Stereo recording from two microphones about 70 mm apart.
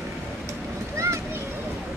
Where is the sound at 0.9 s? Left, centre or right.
Right.